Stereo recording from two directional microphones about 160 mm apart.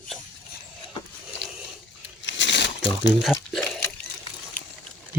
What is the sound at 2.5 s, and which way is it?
Crumpling, 90° left.